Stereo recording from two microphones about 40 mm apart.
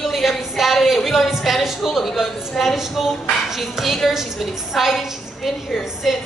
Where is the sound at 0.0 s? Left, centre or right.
Centre.